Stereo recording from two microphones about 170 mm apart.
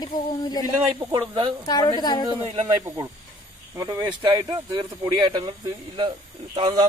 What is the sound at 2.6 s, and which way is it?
Speech, 20° right (ahead or behind).